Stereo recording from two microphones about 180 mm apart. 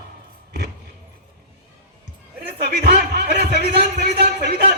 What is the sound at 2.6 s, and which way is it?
Speech, 65° right (ahead or behind).